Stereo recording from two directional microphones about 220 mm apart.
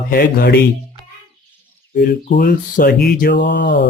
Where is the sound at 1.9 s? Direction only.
35° left (ahead or behind).